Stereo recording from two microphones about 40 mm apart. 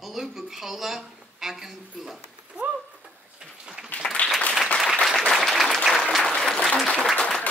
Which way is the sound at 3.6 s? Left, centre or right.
Centre.